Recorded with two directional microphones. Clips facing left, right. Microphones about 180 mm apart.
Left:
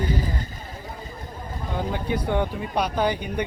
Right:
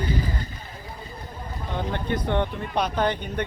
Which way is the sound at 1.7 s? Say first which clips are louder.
Left 1 dB; 10° left (ahead or behind).